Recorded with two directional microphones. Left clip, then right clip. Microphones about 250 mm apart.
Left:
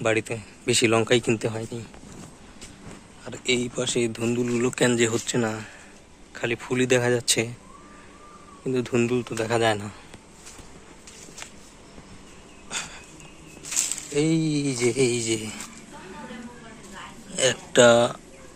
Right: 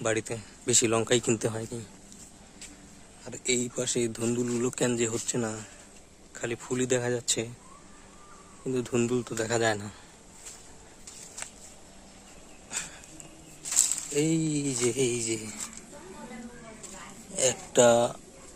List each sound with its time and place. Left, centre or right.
0.0 s speech: centre
3.2 s speech: centre
8.6 s speech: centre
12.7 s a sound: centre
13.7 s speech: centre
17.3 s speech: centre